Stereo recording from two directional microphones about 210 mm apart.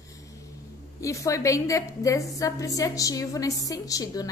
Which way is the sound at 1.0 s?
15° left (ahead or behind).